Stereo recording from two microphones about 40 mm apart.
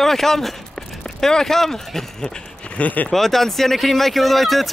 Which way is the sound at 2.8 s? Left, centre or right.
Left.